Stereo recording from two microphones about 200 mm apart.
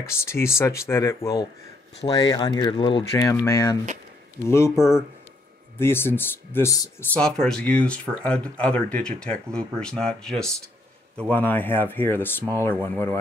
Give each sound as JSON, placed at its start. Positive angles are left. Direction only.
{"t": 0.0, "sound": "speech", "side_deg": 15}
{"t": 5.8, "sound": "speech", "side_deg": 10}